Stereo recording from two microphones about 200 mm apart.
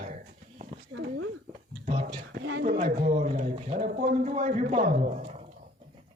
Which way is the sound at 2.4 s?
65° right (ahead or behind).